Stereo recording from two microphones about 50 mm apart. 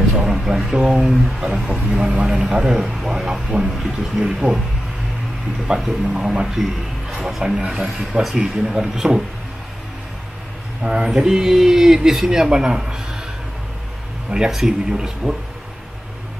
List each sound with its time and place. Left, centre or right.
0.2 s speech: centre
5.9 s speech: centre
10.8 s speech: centre
11.2 s speech: centre
14.3 s speech: centre